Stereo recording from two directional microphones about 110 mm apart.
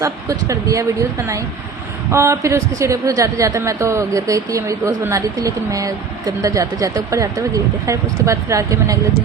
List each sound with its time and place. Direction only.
0.0 s a woman's voice: 30° right (ahead or behind)
2.0 s a woman's voice: 25° right (ahead or behind)